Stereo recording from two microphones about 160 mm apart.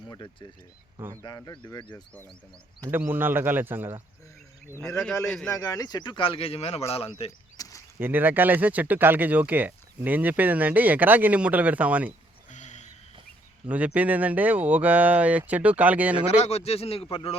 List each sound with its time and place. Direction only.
0.1 s speech: 30° left (ahead or behind)
0.9 s speech: 20° right (ahead or behind)
1.2 s speech: 25° left (ahead or behind)
2.9 s speech: 10° right (ahead or behind)
5.2 s a man's voice: 5° left (ahead or behind)
5.5 s speech: 20° left (ahead or behind); by 7.1 s 40° left (ahead or behind)
7.5 s a sound: 20° left (ahead or behind)
7.9 s speech: 10° right (ahead or behind)
12.5 s a sound: 50° left (ahead or behind)
13.7 s speech: 10° right (ahead or behind)
16.4 s speech: 40° left (ahead or behind)